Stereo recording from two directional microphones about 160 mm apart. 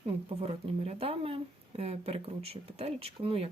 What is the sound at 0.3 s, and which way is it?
Speech, 40° right (ahead or behind).